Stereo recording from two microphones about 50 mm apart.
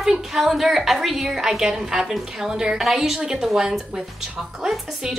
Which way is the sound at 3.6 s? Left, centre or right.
Centre.